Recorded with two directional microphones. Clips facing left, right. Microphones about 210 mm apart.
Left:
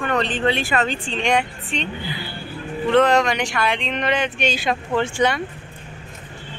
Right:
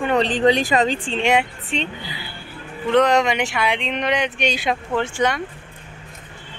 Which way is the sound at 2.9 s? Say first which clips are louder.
Even; 15° right (ahead or behind).